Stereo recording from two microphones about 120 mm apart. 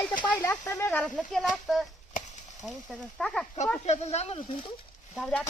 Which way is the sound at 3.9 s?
60° left (ahead or behind).